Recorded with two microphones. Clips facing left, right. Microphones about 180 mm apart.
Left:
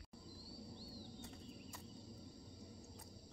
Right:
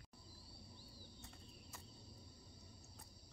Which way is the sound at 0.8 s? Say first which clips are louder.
Left 8 dB; 70° left (ahead or behind).